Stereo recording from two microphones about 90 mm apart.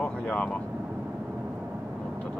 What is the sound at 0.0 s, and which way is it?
Vehicle, 10° left (ahead or behind).